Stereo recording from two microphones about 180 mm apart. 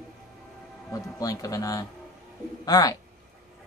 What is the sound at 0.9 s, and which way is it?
Speech, 20° left (ahead or behind).